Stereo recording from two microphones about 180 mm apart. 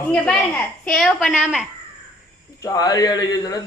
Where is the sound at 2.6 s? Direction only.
20° left (ahead or behind).